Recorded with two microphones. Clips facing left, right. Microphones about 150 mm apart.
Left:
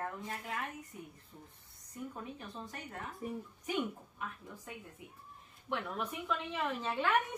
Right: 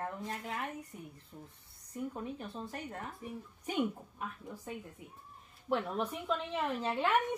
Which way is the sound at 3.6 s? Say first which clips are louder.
Right 3 dB; 35° right (ahead or behind).